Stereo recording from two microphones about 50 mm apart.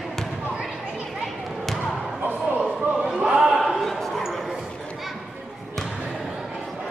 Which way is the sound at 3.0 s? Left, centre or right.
Centre.